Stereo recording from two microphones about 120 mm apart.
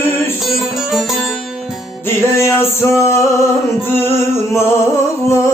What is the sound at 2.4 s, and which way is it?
Music, 20° left (ahead or behind).